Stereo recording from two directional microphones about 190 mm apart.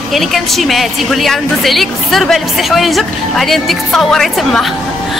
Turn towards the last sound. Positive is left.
turn(degrees=0)  # may be behind; listen again after turning